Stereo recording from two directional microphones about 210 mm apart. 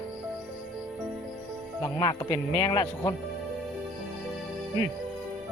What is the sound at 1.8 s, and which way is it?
Speech, 20° left (ahead or behind).